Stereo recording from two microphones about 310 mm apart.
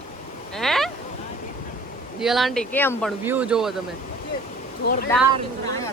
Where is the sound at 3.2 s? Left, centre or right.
Centre.